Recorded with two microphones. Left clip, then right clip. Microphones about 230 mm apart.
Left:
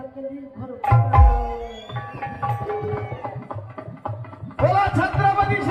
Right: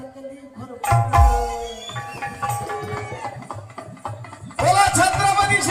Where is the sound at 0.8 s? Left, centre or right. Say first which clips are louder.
Right 2 dB; right.